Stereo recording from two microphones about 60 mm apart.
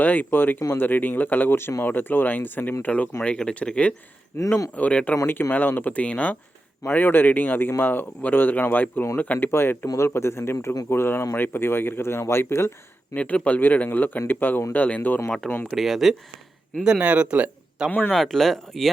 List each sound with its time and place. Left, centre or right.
0.0 s a man's voice: left
4.4 s speech: left
4.7 s speech: left
5.2 s speech: left
6.8 s a man's voice: left
9.5 s a man's voice: left
13.1 s a man's voice: left
15.7 s speech: centre
16.8 s speech: centre
18.1 s speech: centre